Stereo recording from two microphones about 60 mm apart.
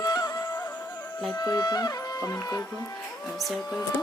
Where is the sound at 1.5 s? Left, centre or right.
Left.